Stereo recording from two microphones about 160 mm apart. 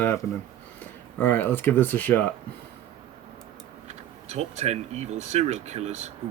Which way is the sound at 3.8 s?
45° right (ahead or behind).